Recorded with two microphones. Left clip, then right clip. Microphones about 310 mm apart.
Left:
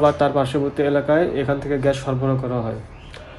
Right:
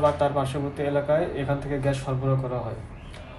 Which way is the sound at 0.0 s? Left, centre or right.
Left.